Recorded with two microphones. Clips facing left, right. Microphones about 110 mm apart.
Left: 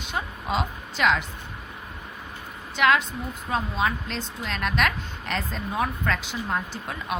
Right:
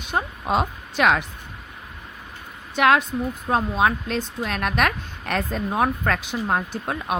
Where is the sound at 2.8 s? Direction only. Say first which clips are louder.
Right 4 dB; 50° right (ahead or behind).